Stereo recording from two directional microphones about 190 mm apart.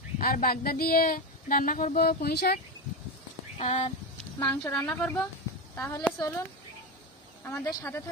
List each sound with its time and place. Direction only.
0.2 s speech: 50° left (ahead or behind)
3.5 s speech: 35° left (ahead or behind)
4.4 s a woman's voice: 15° left (ahead or behind)